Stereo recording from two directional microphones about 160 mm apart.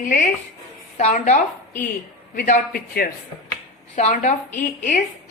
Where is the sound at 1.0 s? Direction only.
45° left (ahead or behind); by 3.1 s 70° left (ahead or behind).